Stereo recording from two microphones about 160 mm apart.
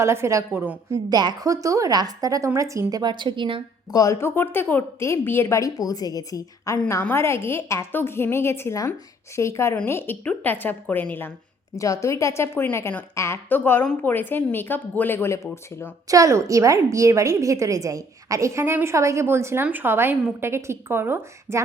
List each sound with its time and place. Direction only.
0.0 s a woman's voice: 15° right (ahead or behind)
1.1 s a woman's voice: 25° right (ahead or behind)
3.9 s a woman's voice: 20° left (ahead or behind)
11.8 s a woman's voice: 20° left (ahead or behind)
16.0 s a woman's voice: 20° right (ahead or behind)